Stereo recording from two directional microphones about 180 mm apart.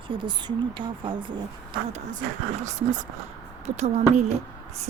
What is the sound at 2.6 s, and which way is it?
Speech, 45° right (ahead or behind).